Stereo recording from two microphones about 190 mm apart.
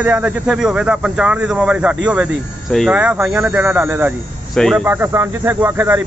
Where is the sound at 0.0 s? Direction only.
5° right (ahead or behind).